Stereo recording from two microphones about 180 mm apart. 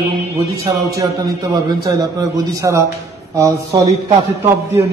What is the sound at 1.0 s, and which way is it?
A man's voice, 25° right (ahead or behind).